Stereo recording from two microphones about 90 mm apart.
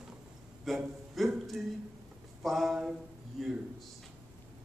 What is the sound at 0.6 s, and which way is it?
A man's voice, centre (ahead or behind).